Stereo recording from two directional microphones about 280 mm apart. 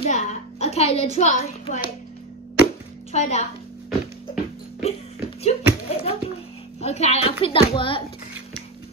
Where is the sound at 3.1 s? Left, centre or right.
Left.